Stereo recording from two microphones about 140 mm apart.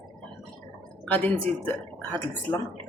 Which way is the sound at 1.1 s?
10° left (ahead or behind).